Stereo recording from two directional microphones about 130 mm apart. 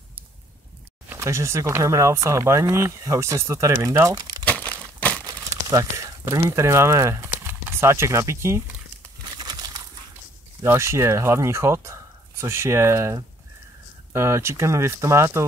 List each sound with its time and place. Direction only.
1.0 s speech: 20° right (ahead or behind)
4.5 s crumpling: 10° left (ahead or behind)
5.2 s speech: 25° right (ahead or behind)
9.4 s a sound: 30° right (ahead or behind)
10.6 s speech: 20° right (ahead or behind)